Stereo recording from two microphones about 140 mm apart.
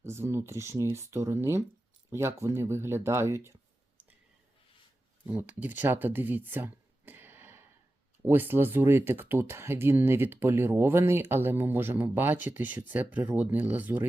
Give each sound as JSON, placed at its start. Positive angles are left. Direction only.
{"t": 0.0, "sound": "speech", "side_deg": -20}
{"t": 5.2, "sound": "speech", "side_deg": -10}